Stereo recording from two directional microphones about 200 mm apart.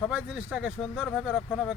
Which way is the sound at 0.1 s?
5° right (ahead or behind).